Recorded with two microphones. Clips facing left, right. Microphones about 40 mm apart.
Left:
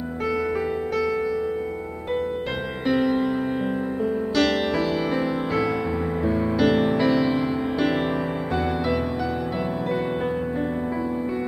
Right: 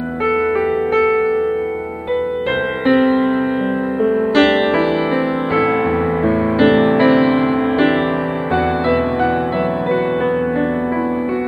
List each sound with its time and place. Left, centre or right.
2.9 s music: right
6.2 s music: right